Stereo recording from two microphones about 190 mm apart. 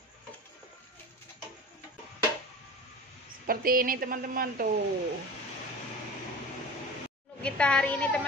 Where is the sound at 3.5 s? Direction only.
50° right (ahead or behind).